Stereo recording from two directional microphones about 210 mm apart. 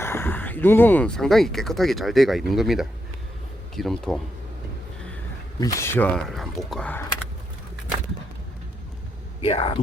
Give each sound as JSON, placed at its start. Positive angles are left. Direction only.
{"t": 0.0, "sound": "speech", "side_deg": 10}
{"t": 5.5, "sound": "speech", "side_deg": 15}
{"t": 9.4, "sound": "speech", "side_deg": 25}